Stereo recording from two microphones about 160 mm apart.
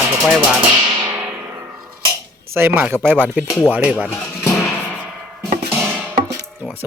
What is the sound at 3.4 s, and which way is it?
Speech, 20° left (ahead or behind).